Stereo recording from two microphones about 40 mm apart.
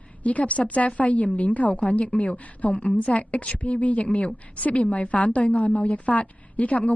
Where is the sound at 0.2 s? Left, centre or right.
Left.